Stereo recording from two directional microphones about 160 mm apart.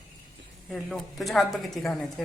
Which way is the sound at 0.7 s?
Centre (ahead or behind).